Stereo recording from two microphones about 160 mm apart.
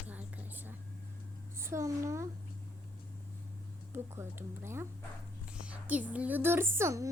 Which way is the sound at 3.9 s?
15° right (ahead or behind).